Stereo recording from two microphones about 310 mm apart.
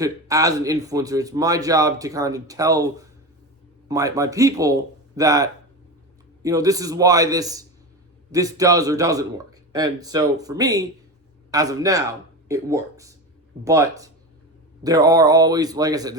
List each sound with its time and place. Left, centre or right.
0.0 s a man's voice: centre